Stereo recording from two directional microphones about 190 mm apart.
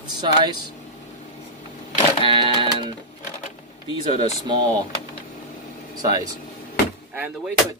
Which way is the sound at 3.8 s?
30° left (ahead or behind).